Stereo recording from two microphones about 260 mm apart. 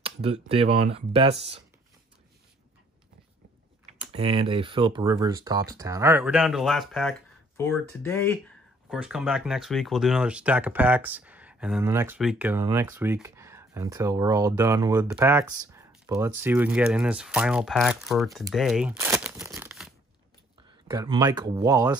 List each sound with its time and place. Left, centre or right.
0.0 s speech: right
4.2 s speech: right; by 8.4 s centre
8.9 s speech: centre
18.5 s crumpling: centre
20.9 s speech: centre